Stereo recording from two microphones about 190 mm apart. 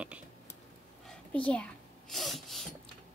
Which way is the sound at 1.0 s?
5° left (ahead or behind).